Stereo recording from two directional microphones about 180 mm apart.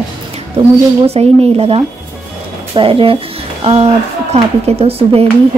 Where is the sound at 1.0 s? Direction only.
35° right (ahead or behind).